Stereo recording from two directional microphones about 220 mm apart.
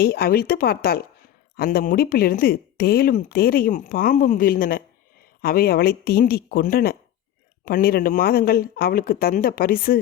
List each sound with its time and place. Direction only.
0.0 s speech: 45° left (ahead or behind)